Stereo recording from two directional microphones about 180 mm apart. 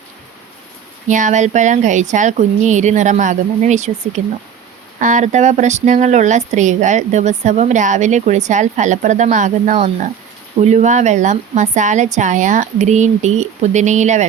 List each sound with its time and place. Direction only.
1.0 s speech: 45° right (ahead or behind)